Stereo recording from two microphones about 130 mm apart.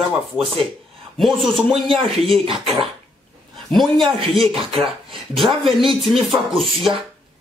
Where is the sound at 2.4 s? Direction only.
45° right (ahead or behind).